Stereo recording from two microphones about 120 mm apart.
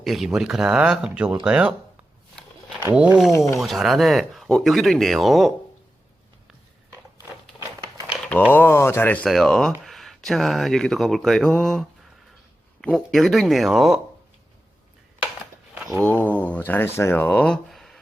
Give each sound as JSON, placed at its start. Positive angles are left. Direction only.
{"t": 0.0, "sound": "speech", "side_deg": 0}
{"t": 2.9, "sound": "speech", "side_deg": -10}
{"t": 3.3, "sound": "speech", "side_deg": 25}
{"t": 3.6, "sound": "speech", "side_deg": 0}
{"t": 7.6, "sound": "a sound", "side_deg": -35}
{"t": 8.2, "sound": "a sound", "side_deg": 15}
{"t": 8.5, "sound": "speech", "side_deg": 20}
{"t": 9.2, "sound": "speech", "side_deg": 5}
{"t": 16.0, "sound": "speech", "side_deg": 15}